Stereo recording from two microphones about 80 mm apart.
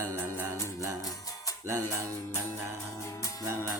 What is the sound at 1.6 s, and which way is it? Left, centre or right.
Music, right.